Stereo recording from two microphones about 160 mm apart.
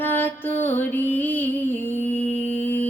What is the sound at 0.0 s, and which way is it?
Music, 15° left (ahead or behind).